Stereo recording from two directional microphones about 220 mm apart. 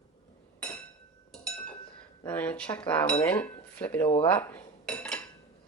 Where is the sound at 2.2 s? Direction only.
10° left (ahead or behind).